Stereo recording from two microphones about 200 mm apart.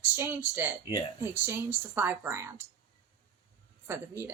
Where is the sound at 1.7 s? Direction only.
10° right (ahead or behind).